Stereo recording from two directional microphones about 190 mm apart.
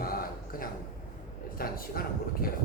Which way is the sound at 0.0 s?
50° left (ahead or behind).